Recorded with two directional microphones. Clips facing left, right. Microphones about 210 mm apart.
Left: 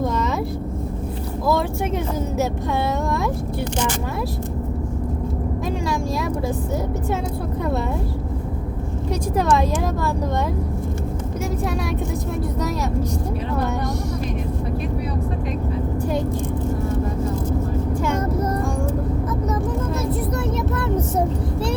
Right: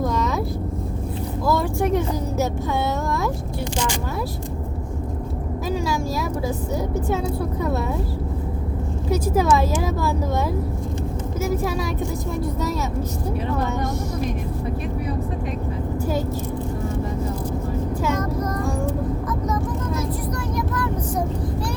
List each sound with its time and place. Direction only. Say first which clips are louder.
0.1 s vehicle: even; centre (ahead or behind)
1.5 s speech: right 1 dB; centre (ahead or behind)
9.0 s speech: right 1 dB; 5° right (ahead or behind)
18.2 s child singing: left 2 dB; 30° left (ahead or behind)
20.6 s vehicle: left 1 dB; 25° left (ahead or behind)